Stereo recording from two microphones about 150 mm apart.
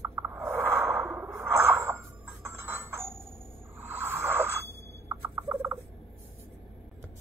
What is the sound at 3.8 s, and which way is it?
Bicycle bell, 15° right (ahead or behind).